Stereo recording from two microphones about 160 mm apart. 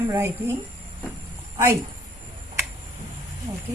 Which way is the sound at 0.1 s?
15° right (ahead or behind).